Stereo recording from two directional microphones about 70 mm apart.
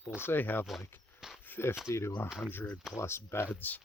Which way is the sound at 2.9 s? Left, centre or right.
Left.